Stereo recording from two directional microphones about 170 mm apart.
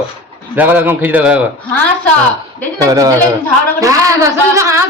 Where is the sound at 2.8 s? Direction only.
20° right (ahead or behind).